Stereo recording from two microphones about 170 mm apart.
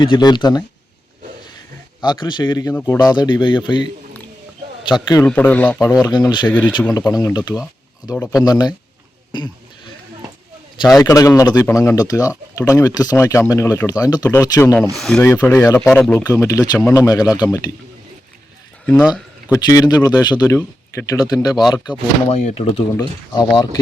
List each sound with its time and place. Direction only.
0.0 s speech: 25° left (ahead or behind)
2.0 s speech: 25° left (ahead or behind)
4.9 s speech: 25° left (ahead or behind)
5.2 s speech: 10° left (ahead or behind)
5.9 s speech: 25° left (ahead or behind)
9.3 s a sound: 25° left (ahead or behind)
10.8 s speech: 25° left (ahead or behind)
14.9 s speech: 5° left (ahead or behind)
15.2 s speech: 15° left (ahead or behind)
16.2 s speech: 20° left (ahead or behind)
19.0 s a sound: 5° right (ahead or behind)
19.5 s speech: 20° left (ahead or behind)
22.3 s speech: 40° left (ahead or behind)
23.0 s speech: 25° left (ahead or behind)